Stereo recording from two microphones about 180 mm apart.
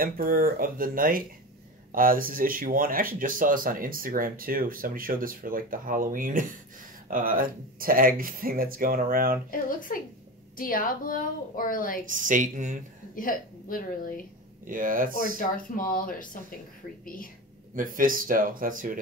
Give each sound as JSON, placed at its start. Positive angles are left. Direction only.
{"t": 0.0, "sound": "speech", "side_deg": -55}
{"t": 9.5, "sound": "a woman's voice", "side_deg": 50}
{"t": 12.1, "sound": "speech", "side_deg": -45}
{"t": 13.1, "sound": "a woman's voice", "side_deg": 50}
{"t": 14.7, "sound": "speech", "side_deg": -50}
{"t": 15.3, "sound": "a woman's voice", "side_deg": 50}
{"t": 17.7, "sound": "speech", "side_deg": -50}